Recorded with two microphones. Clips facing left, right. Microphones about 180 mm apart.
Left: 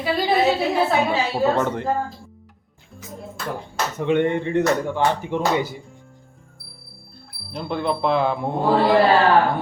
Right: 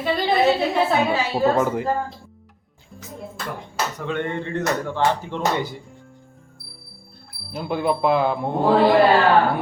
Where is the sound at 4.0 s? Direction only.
20° left (ahead or behind).